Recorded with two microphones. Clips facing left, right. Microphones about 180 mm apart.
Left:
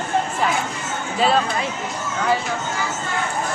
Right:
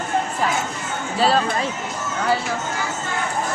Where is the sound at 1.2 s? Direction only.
35° right (ahead or behind).